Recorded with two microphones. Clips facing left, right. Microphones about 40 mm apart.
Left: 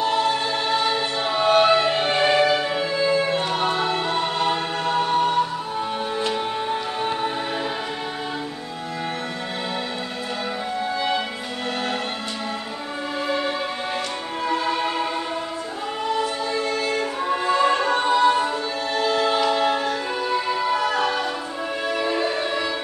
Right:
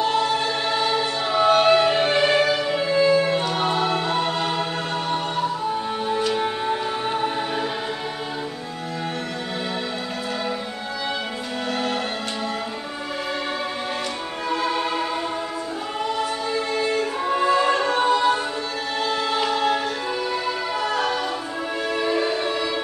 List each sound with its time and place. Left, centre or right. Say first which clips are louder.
0.7 s music: even; centre
2.4 s music: left 1 dB; left
2.7 s music: right 3 dB; centre
6.3 s music: right 1 dB; centre
14.5 s music: even; left
16.5 s music: right 2 dB; centre
16.9 s music: right 1 dB; centre
19.6 s music: left 1 dB; centre